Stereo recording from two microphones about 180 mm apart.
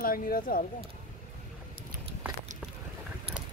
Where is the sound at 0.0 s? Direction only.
55° left (ahead or behind).